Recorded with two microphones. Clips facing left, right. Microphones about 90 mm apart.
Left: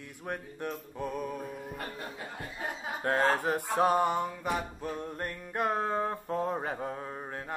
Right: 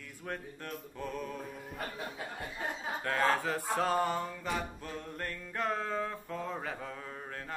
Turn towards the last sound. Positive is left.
turn(degrees=25)  # may be behind; listen again after turning